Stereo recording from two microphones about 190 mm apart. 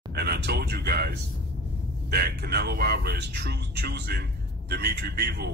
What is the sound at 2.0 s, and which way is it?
A man's voice, 55° right (ahead or behind).